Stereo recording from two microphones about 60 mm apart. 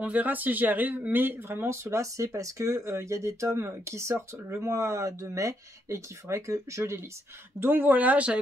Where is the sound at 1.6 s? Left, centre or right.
Right.